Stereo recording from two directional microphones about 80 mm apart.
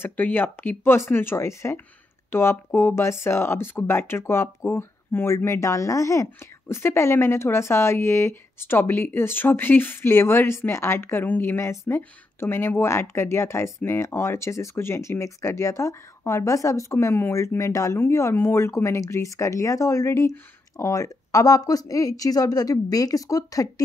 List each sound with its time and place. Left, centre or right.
0.0 s speech: left